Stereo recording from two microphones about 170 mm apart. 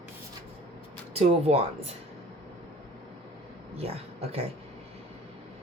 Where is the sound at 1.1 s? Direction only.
40° right (ahead or behind).